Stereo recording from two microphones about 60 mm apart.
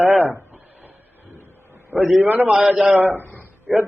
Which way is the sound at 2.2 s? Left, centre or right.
Right.